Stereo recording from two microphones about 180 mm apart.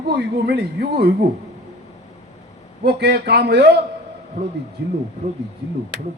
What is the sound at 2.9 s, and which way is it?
Speech, 65° right (ahead or behind).